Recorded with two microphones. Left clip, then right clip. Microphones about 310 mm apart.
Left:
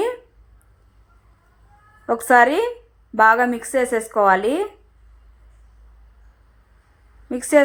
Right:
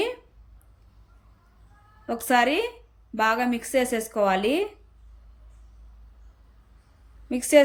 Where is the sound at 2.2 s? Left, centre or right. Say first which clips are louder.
Left 7 dB; left.